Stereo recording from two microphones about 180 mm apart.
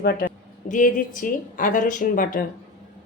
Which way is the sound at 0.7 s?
45° left (ahead or behind).